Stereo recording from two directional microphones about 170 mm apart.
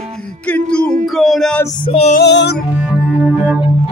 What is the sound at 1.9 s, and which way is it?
Music, 35° left (ahead or behind).